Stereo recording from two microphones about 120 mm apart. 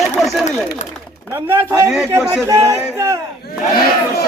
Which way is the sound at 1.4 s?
25° right (ahead or behind).